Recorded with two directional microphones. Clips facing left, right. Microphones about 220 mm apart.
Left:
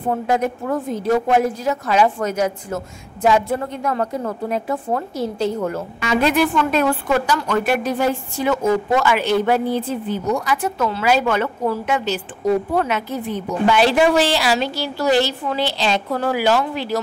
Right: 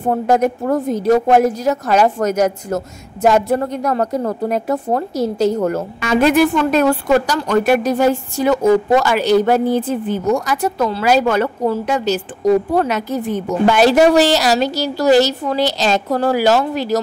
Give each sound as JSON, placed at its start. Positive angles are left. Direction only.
{"t": 0.1, "sound": "a woman's voice", "side_deg": -40}